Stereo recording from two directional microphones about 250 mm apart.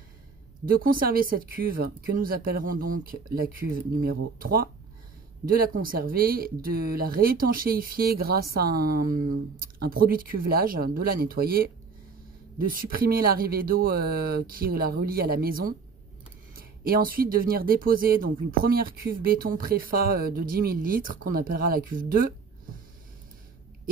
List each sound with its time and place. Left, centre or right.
0.7 s speech: right